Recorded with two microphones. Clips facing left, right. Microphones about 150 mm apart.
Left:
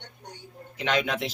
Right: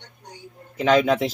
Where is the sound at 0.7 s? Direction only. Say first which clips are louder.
Right 9 dB; 45° right (ahead or behind).